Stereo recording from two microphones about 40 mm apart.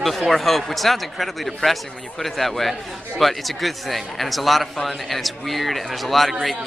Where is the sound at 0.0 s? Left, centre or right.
Centre.